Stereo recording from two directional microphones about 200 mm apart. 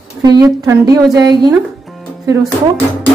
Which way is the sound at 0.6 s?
15° right (ahead or behind).